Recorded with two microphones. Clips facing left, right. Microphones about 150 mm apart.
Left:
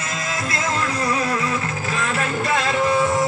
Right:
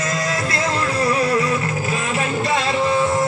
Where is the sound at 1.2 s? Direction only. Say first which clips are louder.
Right 4 dB; 30° right (ahead or behind).